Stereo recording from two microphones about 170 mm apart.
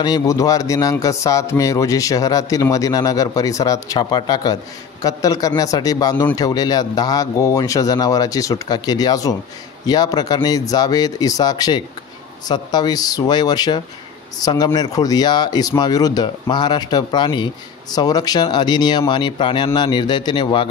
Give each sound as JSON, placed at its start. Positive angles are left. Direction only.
{"t": 0.0, "sound": "speech", "side_deg": 20}